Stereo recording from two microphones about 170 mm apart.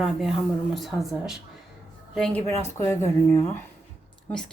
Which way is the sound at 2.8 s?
15° left (ahead or behind).